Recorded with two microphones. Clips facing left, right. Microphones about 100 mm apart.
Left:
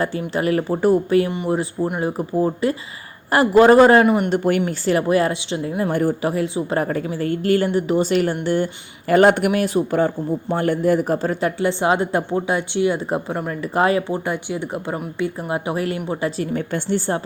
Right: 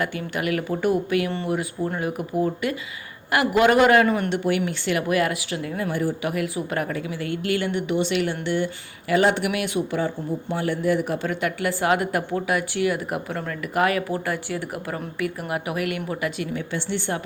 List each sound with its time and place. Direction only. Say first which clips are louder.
0.0 s a woman's voice: left 5 dB; 30° left (ahead or behind)
4.0 s speech: left 5 dB; 20° left (ahead or behind)
4.3 s a woman's voice: left 4 dB; 40° left (ahead or behind); by 5.9 s 25° left (ahead or behind)
5.9 s speech: left 5 dB; 50° left (ahead or behind)
6.2 s a woman's voice: left 5 dB; 30° left (ahead or behind); by 9.5 s 50° left (ahead or behind)
9.5 s a woman's voice: left 6 dB; 35° left (ahead or behind)
16.6 s a woman's voice: left 6 dB; 45° left (ahead or behind)